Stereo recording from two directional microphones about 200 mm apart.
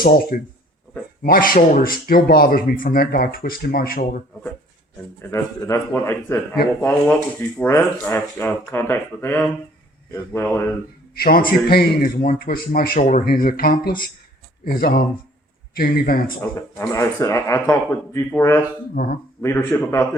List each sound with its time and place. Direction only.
0.0 s speech: 45° left (ahead or behind)
5.2 s speech: 15° left (ahead or behind)
11.1 s a man's voice: 50° left (ahead or behind)
16.6 s speech: 15° left (ahead or behind)
19.0 s speech: 45° left (ahead or behind)
19.4 s speech: 15° left (ahead or behind)